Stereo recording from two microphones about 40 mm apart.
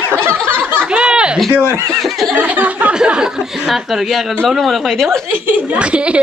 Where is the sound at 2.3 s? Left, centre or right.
Right.